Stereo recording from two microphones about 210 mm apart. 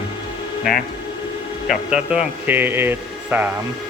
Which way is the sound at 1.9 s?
5° right (ahead or behind).